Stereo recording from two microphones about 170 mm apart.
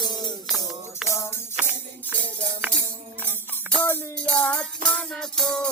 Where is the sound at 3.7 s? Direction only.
10° left (ahead or behind).